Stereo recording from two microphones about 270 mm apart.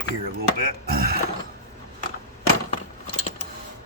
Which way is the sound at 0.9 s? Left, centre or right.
Right.